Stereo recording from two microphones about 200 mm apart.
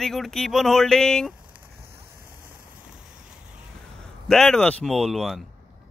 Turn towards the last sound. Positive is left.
turn(degrees=0)  # may be behind; listen again after turning